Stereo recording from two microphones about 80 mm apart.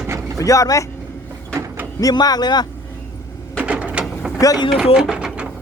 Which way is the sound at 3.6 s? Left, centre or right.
Centre.